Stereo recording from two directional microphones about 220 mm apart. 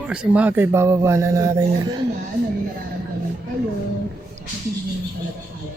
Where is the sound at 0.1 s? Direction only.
5° right (ahead or behind).